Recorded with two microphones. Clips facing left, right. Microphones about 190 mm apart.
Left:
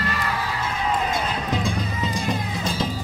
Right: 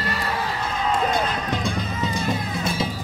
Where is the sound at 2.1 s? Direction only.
10° right (ahead or behind).